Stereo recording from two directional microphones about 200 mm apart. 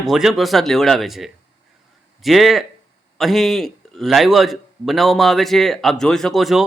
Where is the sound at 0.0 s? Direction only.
Centre (ahead or behind).